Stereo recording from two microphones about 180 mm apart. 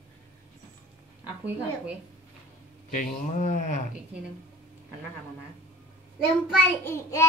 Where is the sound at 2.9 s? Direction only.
45° left (ahead or behind).